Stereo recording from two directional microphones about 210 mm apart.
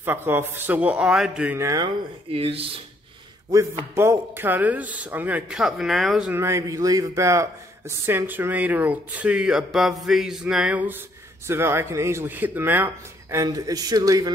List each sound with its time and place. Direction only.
0.0 s speech: 10° right (ahead or behind)
2.3 s speech: 25° right (ahead or behind)
3.9 s speech: 10° right (ahead or behind)